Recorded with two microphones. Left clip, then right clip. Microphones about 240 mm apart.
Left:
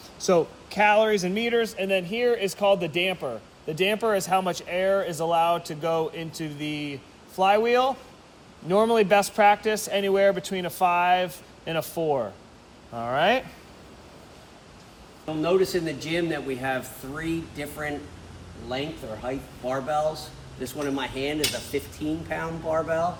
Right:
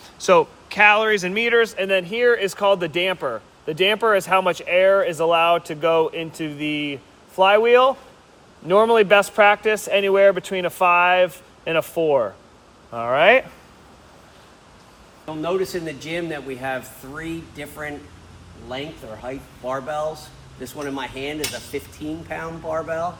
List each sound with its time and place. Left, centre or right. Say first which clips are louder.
0.3 s speech: right 6 dB; centre
2.2 s speech: right 5 dB; right
15.3 s speech: left 1 dB; centre